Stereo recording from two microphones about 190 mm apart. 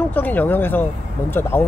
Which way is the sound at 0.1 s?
10° left (ahead or behind).